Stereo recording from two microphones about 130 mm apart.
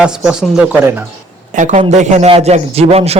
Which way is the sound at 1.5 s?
70° right (ahead or behind).